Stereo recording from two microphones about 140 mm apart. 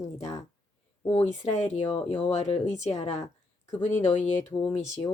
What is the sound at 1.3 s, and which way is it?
Speech, 55° left (ahead or behind).